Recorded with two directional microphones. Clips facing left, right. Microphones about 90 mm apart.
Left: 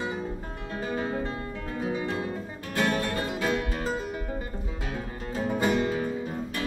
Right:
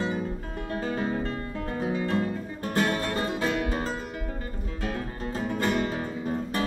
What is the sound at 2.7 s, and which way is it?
Music, 35° right (ahead or behind).